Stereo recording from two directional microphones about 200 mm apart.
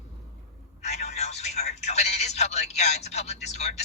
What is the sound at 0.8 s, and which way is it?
Speech, 35° left (ahead or behind).